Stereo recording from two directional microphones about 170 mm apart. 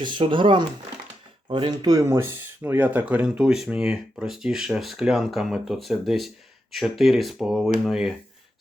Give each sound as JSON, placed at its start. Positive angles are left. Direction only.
{"t": 0.0, "sound": "speech", "side_deg": -30}